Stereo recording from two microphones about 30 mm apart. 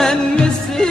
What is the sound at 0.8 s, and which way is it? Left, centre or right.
Music, left.